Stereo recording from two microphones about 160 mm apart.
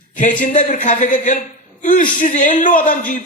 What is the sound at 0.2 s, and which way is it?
A man's voice, 55° left (ahead or behind).